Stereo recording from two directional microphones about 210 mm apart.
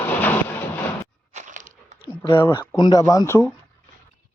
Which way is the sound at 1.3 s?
35° right (ahead or behind).